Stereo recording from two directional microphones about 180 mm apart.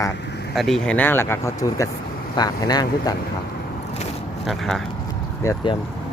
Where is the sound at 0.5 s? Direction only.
Centre (ahead or behind); by 3.1 s 20° left (ahead or behind).